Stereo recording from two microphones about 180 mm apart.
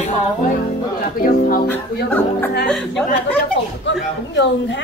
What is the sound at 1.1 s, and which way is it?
Speech, 55° left (ahead or behind).